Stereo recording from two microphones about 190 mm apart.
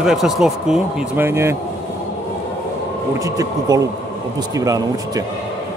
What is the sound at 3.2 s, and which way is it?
Speech, 20° right (ahead or behind).